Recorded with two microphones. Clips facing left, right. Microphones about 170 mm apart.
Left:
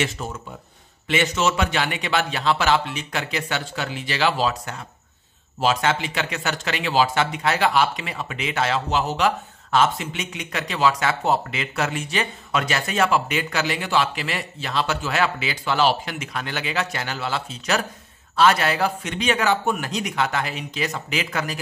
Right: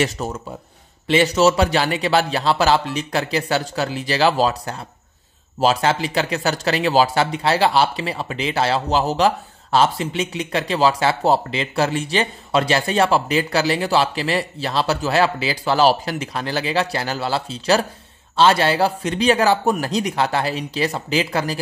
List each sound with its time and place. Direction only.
0.0 s speech: 40° right (ahead or behind)